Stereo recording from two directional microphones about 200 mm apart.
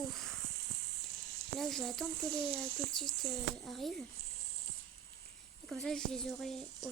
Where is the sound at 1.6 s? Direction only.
Centre (ahead or behind).